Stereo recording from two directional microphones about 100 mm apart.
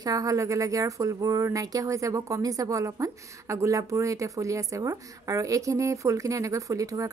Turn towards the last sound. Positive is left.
turn(degrees=-35)  # may be behind; listen again after turning